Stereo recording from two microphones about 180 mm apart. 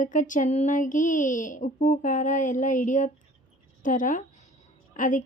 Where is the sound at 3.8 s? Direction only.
45° left (ahead or behind).